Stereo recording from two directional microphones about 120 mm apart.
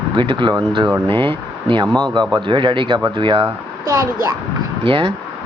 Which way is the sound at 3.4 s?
25° right (ahead or behind).